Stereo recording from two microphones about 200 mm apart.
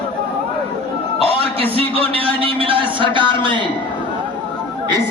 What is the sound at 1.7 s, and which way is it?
A man's voice, 30° right (ahead or behind).